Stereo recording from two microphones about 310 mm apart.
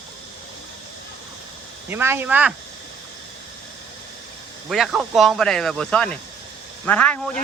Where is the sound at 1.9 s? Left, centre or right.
Centre.